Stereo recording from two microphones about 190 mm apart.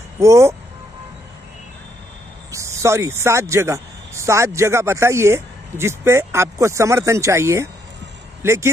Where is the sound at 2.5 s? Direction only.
15° right (ahead or behind).